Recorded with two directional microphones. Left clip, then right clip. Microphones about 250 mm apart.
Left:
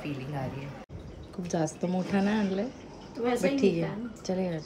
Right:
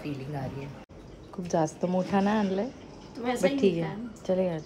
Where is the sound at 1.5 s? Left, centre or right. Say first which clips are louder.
Right 4 dB; centre.